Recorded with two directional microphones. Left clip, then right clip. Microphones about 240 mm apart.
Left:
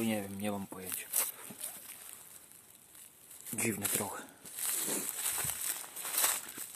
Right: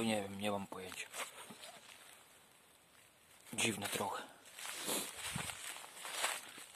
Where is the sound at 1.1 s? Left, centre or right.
Left.